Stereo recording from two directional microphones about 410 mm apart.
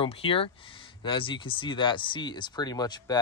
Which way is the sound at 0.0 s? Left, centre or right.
Centre.